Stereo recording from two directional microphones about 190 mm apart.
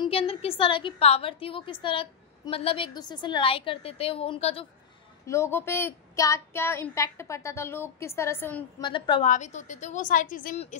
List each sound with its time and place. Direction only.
0.0 s a woman's voice: 30° left (ahead or behind)
5.2 s speech: 15° left (ahead or behind)
8.8 s a woman's voice: 25° left (ahead or behind)
9.2 s a woman's voice: 40° left (ahead or behind)